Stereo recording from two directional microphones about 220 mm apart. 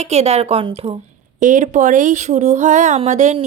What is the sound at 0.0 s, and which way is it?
A woman's voice, 30° right (ahead or behind).